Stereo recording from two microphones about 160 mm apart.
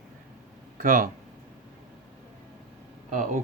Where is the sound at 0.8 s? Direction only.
55° right (ahead or behind).